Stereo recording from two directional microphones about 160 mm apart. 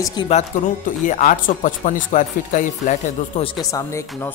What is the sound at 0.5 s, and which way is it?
Speech, 50° left (ahead or behind).